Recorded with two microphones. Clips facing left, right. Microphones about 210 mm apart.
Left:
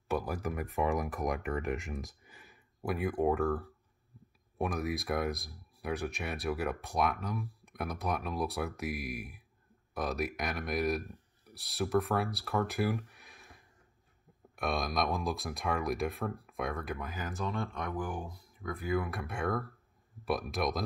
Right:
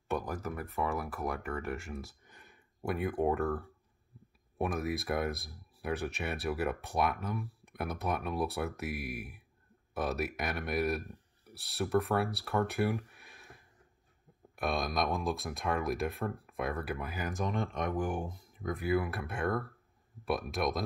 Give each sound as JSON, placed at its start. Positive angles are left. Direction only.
{"t": 0.1, "sound": "speech", "side_deg": 10}
{"t": 2.3, "sound": "speech", "side_deg": 0}
{"t": 18.9, "sound": "speech", "side_deg": -5}